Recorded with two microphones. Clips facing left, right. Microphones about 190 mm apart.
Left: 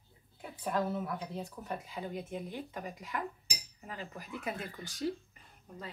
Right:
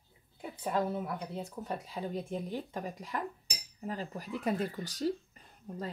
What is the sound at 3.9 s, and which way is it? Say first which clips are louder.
Speech: right 5 dB; 35° right (ahead or behind).